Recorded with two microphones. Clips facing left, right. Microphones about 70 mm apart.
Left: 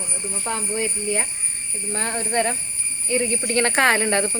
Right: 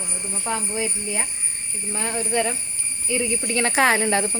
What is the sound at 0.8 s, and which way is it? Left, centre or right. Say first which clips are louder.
Speech: left 2 dB; left.